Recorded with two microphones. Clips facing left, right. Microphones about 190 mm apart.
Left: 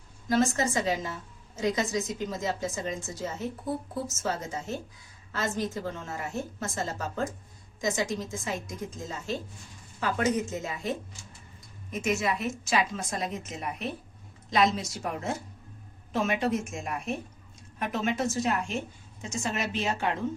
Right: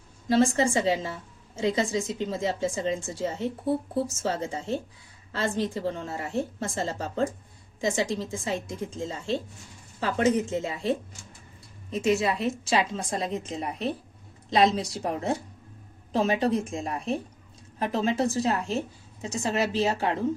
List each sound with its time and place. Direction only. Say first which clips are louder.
0.3 s a woman's voice: right 4 dB; 30° right (ahead or behind)